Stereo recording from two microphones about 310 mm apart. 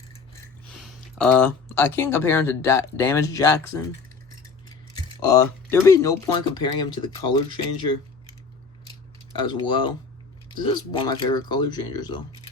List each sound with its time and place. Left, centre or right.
0.7 s speech: centre
5.2 s speech: centre
9.3 s speech: centre